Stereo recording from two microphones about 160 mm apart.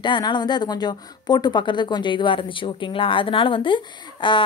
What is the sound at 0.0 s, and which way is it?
Speech, 30° left (ahead or behind).